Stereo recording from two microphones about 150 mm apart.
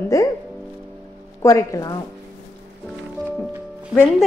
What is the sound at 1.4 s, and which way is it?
Speech, 20° left (ahead or behind).